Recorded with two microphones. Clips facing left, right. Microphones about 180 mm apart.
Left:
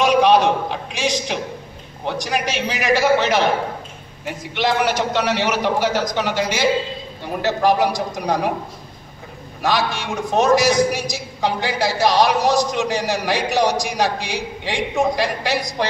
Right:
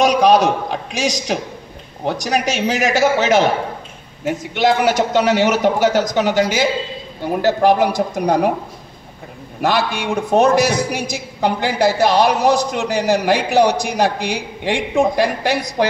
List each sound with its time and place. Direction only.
0.0 s a man's voice: 45° right (ahead or behind)
9.6 s a man's voice: 60° right (ahead or behind)